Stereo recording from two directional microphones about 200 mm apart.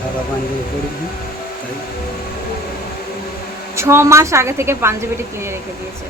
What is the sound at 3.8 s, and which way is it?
A woman's voice, 15° right (ahead or behind).